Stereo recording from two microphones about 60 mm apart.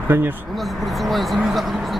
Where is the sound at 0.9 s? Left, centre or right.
Centre.